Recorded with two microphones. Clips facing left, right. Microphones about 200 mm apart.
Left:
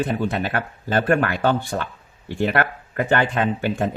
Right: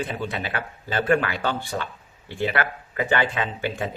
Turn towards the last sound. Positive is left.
turn(degrees=50)  # may be behind; listen again after turning